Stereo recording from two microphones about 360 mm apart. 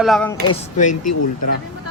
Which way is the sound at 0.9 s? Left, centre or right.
Left.